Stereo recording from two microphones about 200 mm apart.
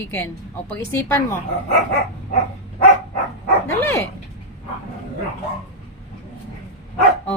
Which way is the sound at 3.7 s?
10° left (ahead or behind).